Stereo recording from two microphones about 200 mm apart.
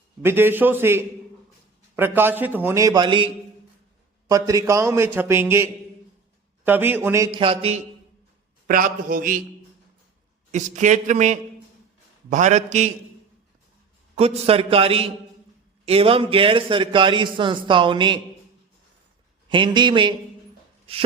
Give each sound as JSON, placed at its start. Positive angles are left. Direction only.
{"t": 0.3, "sound": "a man's voice", "side_deg": -10}
{"t": 4.3, "sound": "a man's voice", "side_deg": -15}
{"t": 8.6, "sound": "a man's voice", "side_deg": -45}
{"t": 10.5, "sound": "speech", "side_deg": -35}
{"t": 14.2, "sound": "a man's voice", "side_deg": -30}
{"t": 19.5, "sound": "a man's voice", "side_deg": -25}